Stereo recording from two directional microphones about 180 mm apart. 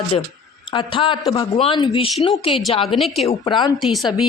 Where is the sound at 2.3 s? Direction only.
Centre (ahead or behind).